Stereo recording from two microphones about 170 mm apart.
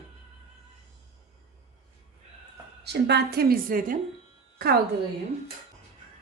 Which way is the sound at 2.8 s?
75° right (ahead or behind).